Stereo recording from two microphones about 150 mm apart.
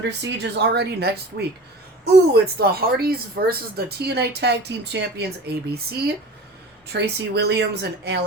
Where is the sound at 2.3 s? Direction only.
90° right.